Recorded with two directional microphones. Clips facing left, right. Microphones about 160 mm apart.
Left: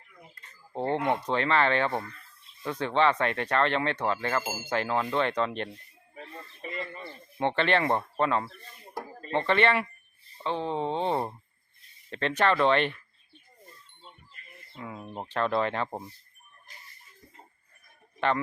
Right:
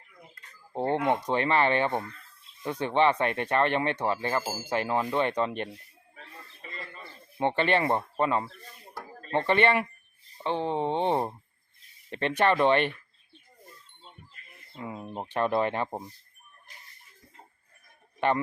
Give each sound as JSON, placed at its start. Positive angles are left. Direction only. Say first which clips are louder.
{"t": 0.7, "sound": "speech", "louder": "right 1 dB", "side_deg": -15}
{"t": 6.6, "sound": "radio", "louder": "left 7 dB", "side_deg": 15}
{"t": 7.3, "sound": "speech", "louder": "right 1 dB", "side_deg": -10}
{"t": 9.5, "sound": "speech", "louder": "right 1 dB", "side_deg": -15}
{"t": 14.8, "sound": "speech", "louder": "right 2 dB", "side_deg": -15}